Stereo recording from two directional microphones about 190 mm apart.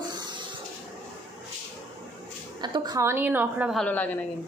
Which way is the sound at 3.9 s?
10° left (ahead or behind).